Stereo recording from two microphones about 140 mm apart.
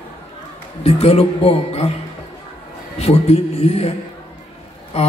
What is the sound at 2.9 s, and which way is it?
Speech, 45° left (ahead or behind).